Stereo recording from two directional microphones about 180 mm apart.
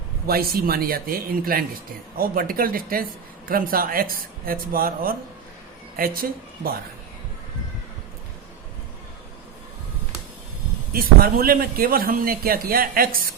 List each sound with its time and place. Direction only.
0.3 s a man's voice: 55° right (ahead or behind)
10.9 s a man's voice: 55° right (ahead or behind)